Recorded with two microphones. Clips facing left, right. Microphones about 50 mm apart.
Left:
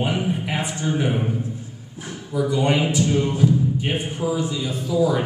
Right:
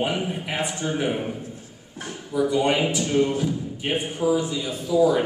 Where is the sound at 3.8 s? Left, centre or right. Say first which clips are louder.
Even; centre.